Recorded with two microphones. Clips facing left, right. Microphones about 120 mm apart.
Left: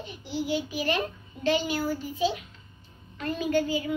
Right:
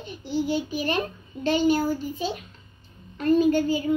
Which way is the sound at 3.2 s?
40° right (ahead or behind).